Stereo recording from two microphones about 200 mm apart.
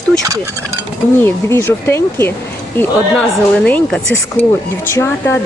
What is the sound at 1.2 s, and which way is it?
A woman's voice, 10° left (ahead or behind).